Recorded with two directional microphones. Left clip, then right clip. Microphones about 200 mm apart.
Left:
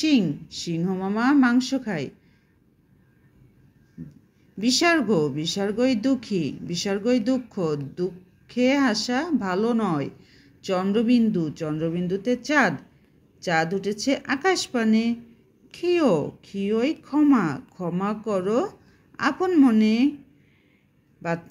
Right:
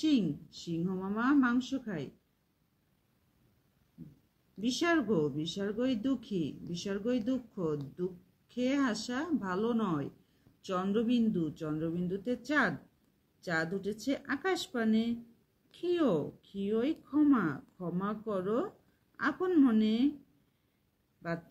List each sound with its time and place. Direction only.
0.0 s speech: 30° left (ahead or behind)
4.6 s speech: 30° left (ahead or behind)